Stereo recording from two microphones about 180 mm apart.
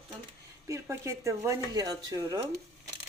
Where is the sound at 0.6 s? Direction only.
15° right (ahead or behind).